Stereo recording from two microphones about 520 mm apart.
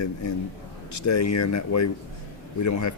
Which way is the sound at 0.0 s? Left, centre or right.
Left.